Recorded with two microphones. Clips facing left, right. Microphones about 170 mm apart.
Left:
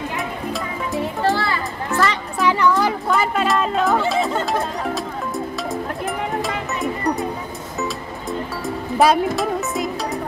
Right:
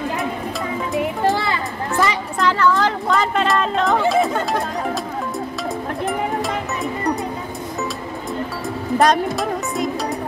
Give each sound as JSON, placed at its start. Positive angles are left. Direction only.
{"t": 0.9, "sound": "children playing", "side_deg": -20}
{"t": 2.3, "sound": "a sound", "side_deg": 15}
{"t": 3.1, "sound": "chatter", "side_deg": 5}
{"t": 8.3, "sound": "music", "side_deg": 0}